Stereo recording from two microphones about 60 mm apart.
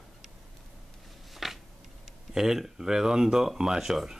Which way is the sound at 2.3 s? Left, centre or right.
Centre.